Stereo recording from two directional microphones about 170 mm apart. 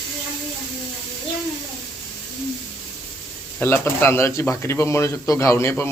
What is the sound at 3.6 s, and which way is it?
Speech, 15° left (ahead or behind).